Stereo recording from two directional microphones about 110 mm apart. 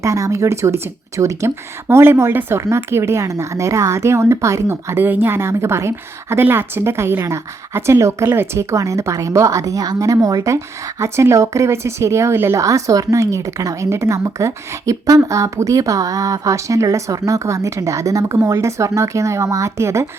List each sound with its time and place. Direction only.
0.0 s speech: 30° right (ahead or behind)